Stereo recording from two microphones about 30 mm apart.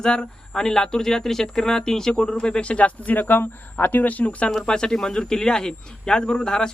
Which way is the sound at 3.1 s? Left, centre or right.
Left.